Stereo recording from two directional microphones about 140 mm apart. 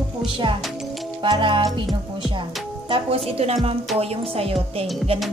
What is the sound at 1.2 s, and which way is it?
Speech, 35° right (ahead or behind).